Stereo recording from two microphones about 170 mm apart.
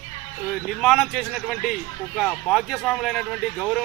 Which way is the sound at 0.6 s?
Centre (ahead or behind).